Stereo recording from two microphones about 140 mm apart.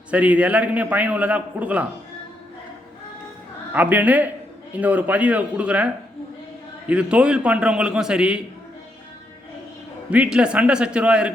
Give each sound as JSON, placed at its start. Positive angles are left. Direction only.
{"t": 0.1, "sound": "a man's voice", "side_deg": -10}
{"t": 3.7, "sound": "a man's voice", "side_deg": -10}
{"t": 10.1, "sound": "a man's voice", "side_deg": -5}